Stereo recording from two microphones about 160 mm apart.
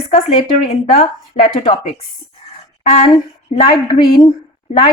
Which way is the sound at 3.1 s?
35° left (ahead or behind).